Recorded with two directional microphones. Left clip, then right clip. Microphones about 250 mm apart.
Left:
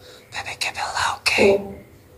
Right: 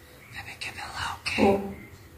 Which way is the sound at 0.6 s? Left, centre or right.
Left.